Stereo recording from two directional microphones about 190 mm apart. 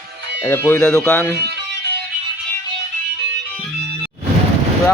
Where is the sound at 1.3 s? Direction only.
60° right (ahead or behind).